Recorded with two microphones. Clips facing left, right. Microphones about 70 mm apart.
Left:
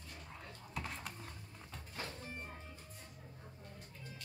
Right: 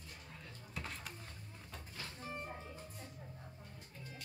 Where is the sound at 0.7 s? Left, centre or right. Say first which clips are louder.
Left 2 dB; centre.